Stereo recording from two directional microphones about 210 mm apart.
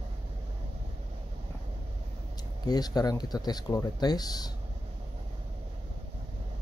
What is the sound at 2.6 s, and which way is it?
Speech, 20° left (ahead or behind).